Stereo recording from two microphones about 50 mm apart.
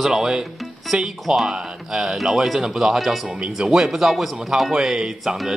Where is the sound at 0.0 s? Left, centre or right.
Centre.